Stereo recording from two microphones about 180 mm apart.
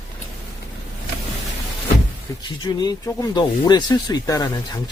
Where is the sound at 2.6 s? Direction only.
20° left (ahead or behind).